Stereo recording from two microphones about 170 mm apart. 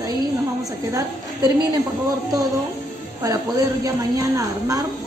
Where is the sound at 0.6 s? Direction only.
20° right (ahead or behind).